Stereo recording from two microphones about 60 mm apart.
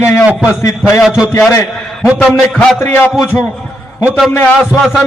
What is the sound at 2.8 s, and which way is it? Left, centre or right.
Speech, left.